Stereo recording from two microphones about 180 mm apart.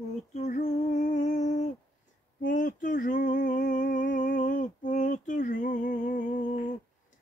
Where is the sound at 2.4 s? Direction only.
45° left (ahead or behind).